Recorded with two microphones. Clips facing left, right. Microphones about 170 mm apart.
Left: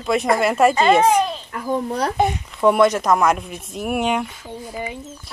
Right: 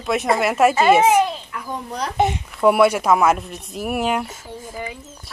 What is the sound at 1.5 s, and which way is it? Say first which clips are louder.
Speech: left 3 dB; 45° left (ahead or behind).